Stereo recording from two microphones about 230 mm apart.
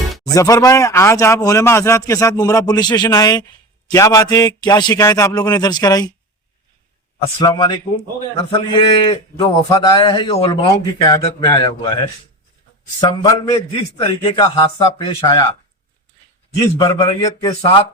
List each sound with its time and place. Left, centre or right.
0.3 s speech: centre
7.3 s a man's voice: centre
16.6 s a man's voice: centre